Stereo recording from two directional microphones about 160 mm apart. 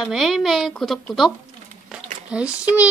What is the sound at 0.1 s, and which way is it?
A woman's voice, centre (ahead or behind).